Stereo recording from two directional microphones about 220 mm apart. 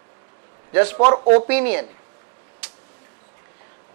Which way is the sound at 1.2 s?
35° right (ahead or behind).